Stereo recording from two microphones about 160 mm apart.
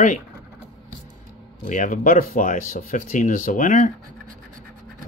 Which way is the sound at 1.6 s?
55° left (ahead or behind).